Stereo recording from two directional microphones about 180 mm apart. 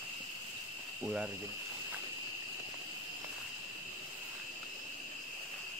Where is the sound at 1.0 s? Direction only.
5° right (ahead or behind).